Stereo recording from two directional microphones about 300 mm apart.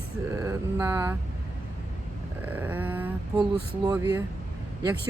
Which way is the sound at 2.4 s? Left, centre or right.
Centre.